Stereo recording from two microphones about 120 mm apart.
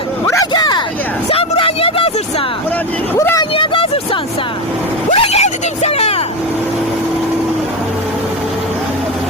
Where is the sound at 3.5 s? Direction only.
45° left (ahead or behind).